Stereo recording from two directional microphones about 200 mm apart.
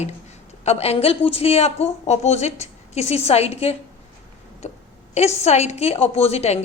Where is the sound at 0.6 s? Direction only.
30° left (ahead or behind).